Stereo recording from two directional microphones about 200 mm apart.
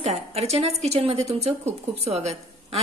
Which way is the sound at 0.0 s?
30° right (ahead or behind).